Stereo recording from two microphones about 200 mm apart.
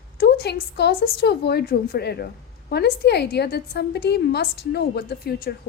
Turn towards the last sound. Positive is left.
turn(degrees=50)  # may be behind; listen again after turning